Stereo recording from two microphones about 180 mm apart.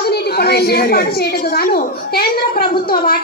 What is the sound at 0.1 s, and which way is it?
A woman's voice, 60° left (ahead or behind).